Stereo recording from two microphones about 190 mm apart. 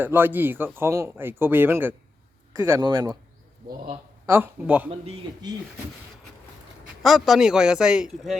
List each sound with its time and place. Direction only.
0.0 s speech: 10° right (ahead or behind)
4.3 s speech: 10° right (ahead or behind)
4.9 s a man's voice: 30° right (ahead or behind)
7.0 s speech: centre (ahead or behind)